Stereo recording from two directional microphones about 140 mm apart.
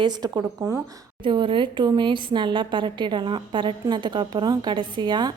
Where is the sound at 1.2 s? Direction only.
35° right (ahead or behind).